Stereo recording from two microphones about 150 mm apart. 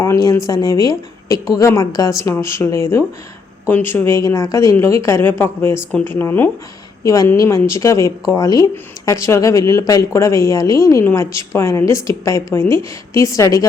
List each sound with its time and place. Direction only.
0.0 s speech: 20° left (ahead or behind)